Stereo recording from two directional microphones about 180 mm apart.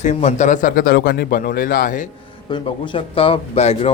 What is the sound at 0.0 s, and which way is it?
Speech, 40° left (ahead or behind).